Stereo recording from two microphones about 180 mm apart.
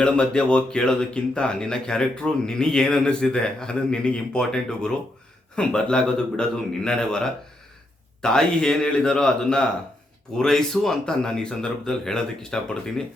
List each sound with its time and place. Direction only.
0.0 s speech: 5° left (ahead or behind)